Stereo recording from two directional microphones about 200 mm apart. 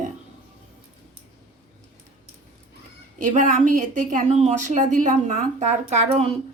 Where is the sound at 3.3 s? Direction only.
40° right (ahead or behind).